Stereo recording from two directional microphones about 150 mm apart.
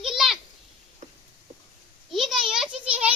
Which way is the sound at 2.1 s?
Centre (ahead or behind).